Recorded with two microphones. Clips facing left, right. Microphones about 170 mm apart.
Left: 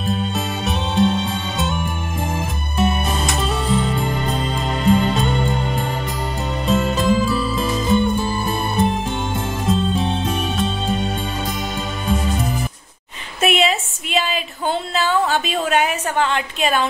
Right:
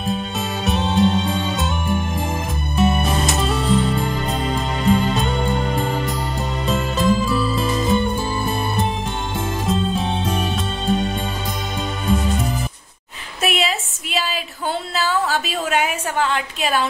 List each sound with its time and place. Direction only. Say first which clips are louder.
3.3 s music: right 1 dB; centre (ahead or behind)
5.0 s music: left 1 dB; centre (ahead or behind)
6.7 s music: left 2 dB; centre (ahead or behind)
13.4 s a sound: left 4 dB; centre (ahead or behind)